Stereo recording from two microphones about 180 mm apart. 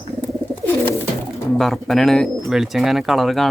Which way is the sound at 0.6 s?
10° left (ahead or behind).